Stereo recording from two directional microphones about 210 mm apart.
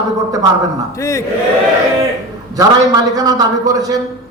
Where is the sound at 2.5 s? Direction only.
15° right (ahead or behind).